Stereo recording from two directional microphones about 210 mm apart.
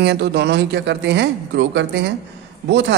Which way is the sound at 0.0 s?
55° right (ahead or behind).